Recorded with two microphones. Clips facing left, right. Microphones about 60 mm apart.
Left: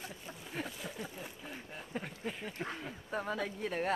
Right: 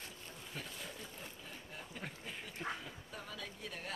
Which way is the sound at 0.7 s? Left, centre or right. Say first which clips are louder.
Left 5 dB; centre.